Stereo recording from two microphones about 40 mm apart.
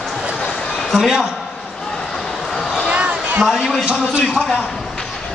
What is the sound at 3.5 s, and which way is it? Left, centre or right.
A man's voice, centre.